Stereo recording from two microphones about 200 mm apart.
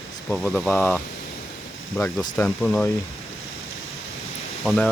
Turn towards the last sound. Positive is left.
turn(degrees=0)  # may be behind; listen again after turning